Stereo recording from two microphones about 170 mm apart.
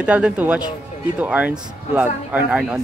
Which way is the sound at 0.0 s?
5° right (ahead or behind).